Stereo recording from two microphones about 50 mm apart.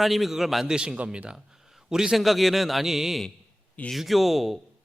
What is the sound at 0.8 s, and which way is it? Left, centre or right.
Speech, right.